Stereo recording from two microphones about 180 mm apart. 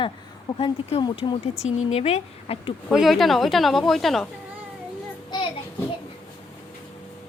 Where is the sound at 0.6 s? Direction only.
30° left (ahead or behind).